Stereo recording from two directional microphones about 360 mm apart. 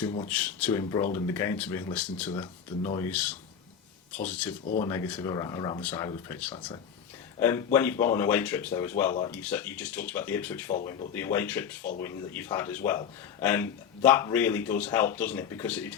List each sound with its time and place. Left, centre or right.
0.3 s speech: centre
11.8 s speech: left
12.0 s speech: centre